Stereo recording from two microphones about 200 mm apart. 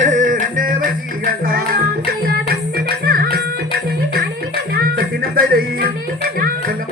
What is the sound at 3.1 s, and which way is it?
Music, 50° right (ahead or behind).